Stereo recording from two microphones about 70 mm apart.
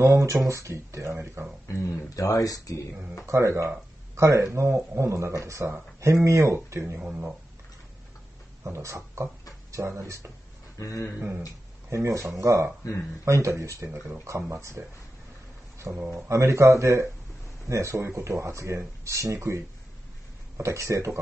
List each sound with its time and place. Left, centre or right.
0.0 s speech: right
1.7 s speech: left
3.3 s speech: right
7.0 s speech: right
8.6 s speech: right
10.8 s speech: left
11.9 s speech: right
15.8 s speech: right